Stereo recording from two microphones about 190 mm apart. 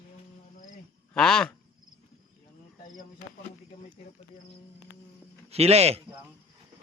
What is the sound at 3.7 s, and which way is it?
Snake, 50° left (ahead or behind).